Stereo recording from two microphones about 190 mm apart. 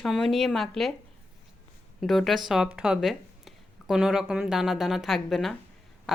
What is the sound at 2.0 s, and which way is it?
Speech, centre (ahead or behind).